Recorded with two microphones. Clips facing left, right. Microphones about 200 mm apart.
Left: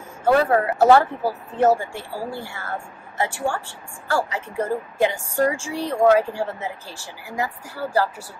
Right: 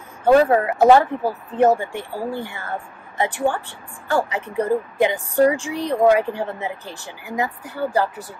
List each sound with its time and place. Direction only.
0.2 s speech: 20° right (ahead or behind)